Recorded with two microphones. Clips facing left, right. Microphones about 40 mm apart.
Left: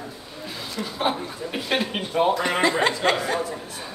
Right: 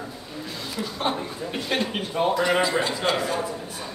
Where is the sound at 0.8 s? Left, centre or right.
Centre.